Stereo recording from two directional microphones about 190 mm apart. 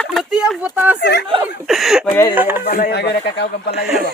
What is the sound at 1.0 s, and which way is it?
Speech, 60° left (ahead or behind).